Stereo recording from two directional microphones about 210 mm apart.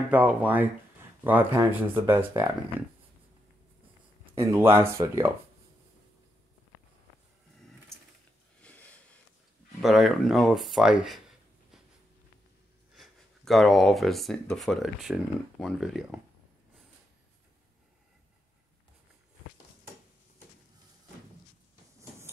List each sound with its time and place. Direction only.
0.1 s speech: 5° right (ahead or behind)
4.4 s speech: 10° right (ahead or behind)
8.6 s sniff: 5° left (ahead or behind)
9.8 s speech: centre (ahead or behind)
12.9 s speech: centre (ahead or behind)